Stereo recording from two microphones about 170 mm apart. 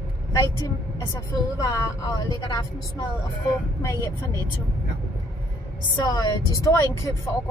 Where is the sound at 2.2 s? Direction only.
25° left (ahead or behind).